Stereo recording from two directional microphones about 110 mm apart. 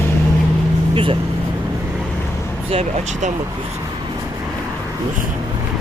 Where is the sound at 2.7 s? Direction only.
80° right.